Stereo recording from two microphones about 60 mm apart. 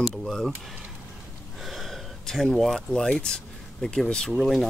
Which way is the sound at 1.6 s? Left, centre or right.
Centre.